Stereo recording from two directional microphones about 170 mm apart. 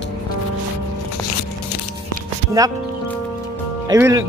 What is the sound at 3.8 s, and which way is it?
Speech, 20° right (ahead or behind).